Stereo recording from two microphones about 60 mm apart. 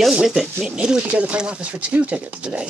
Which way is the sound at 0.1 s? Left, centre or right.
Centre.